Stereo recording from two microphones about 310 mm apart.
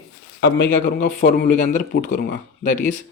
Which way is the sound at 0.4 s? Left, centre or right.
Left.